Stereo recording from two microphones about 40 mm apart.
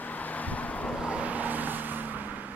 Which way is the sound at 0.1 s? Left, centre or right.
Left.